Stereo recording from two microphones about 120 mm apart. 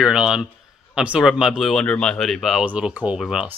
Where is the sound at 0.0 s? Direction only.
5° right (ahead or behind).